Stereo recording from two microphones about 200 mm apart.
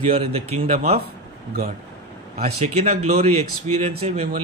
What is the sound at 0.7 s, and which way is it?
Speech, 45° right (ahead or behind).